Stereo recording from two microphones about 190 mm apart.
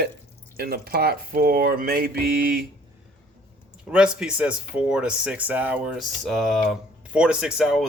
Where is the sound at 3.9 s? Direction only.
5° right (ahead or behind).